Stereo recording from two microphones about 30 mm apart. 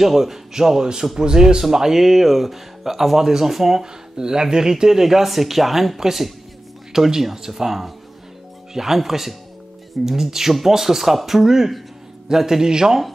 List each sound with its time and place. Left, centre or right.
0.0 s speech: centre
3.8 s speech: right